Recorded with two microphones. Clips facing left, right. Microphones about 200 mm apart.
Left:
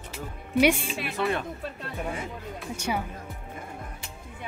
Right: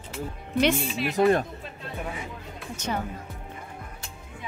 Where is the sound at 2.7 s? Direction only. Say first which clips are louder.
Left 1 dB; 10° left (ahead or behind).